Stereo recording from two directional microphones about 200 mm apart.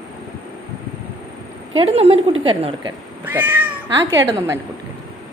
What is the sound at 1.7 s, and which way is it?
A woman's voice, 30° right (ahead or behind).